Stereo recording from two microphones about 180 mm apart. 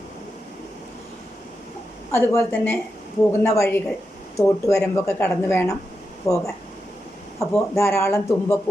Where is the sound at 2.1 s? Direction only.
15° left (ahead or behind).